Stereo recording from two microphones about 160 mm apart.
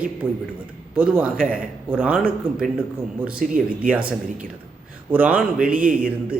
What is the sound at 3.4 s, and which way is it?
Speech, 55° right (ahead or behind).